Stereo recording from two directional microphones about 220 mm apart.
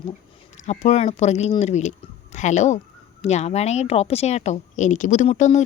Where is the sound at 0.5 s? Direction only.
30° left (ahead or behind).